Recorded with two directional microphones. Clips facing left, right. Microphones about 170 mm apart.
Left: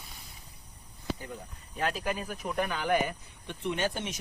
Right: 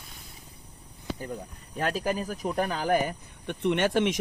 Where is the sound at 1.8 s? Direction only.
40° right (ahead or behind).